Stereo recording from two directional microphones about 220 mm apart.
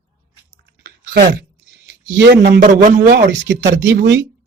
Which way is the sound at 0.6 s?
50° right (ahead or behind).